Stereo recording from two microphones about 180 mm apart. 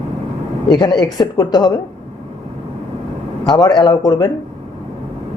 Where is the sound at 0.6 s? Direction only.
25° left (ahead or behind).